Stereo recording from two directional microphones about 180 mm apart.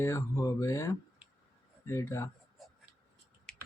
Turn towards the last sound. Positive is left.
turn(degrees=5)  # may be behind; listen again after turning